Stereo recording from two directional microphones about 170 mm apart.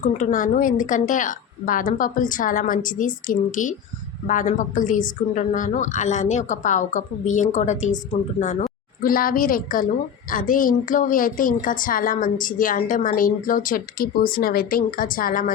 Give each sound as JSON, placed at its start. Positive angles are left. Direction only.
{"t": 0.1, "sound": "a woman's voice", "side_deg": 50}